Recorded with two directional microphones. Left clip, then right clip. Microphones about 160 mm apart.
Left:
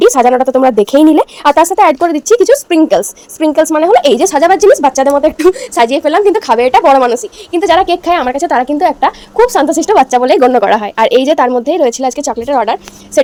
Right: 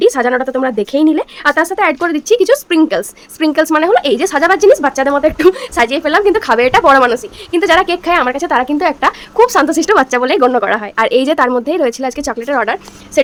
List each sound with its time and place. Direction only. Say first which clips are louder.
0.0 s a sound: left 4 dB; 15° left (ahead or behind)
0.3 s speech: left 6 dB; 5° left (ahead or behind)
4.1 s speech: left 3 dB; 15° left (ahead or behind)
8.8 s speech: left 3 dB; 5° left (ahead or behind)